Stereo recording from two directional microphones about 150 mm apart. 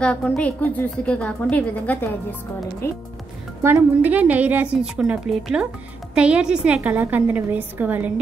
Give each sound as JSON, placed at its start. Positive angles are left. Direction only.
{"t": 0.0, "sound": "a woman's voice", "side_deg": 10}
{"t": 3.6, "sound": "a woman's voice", "side_deg": -15}